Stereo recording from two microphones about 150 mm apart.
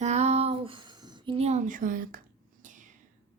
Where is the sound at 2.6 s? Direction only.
60° right (ahead or behind).